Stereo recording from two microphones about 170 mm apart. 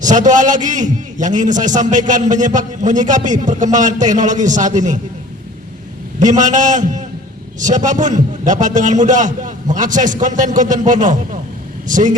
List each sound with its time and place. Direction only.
0.0 s a man's voice: 45° right (ahead or behind)
6.1 s a man's voice: 45° right (ahead or behind)